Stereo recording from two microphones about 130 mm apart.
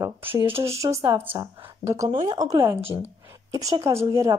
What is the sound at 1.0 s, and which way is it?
Speech, 40° right (ahead or behind).